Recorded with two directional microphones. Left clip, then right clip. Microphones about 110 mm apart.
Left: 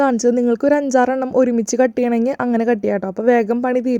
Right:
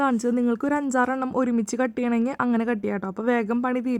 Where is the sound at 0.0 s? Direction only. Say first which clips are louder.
Left 8 dB; 30° left (ahead or behind).